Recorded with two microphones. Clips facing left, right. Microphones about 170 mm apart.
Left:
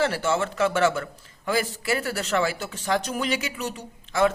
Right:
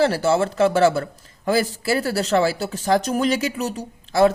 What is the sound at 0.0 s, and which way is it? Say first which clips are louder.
Speech: right 6 dB; 35° right (ahead or behind).